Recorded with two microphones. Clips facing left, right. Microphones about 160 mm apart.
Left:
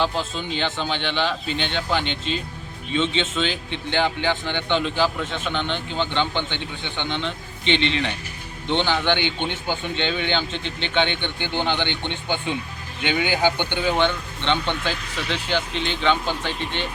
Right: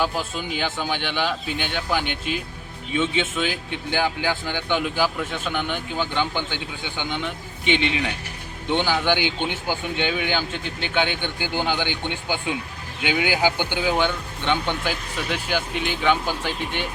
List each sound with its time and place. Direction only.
0.0 s speech: 10° right (ahead or behind)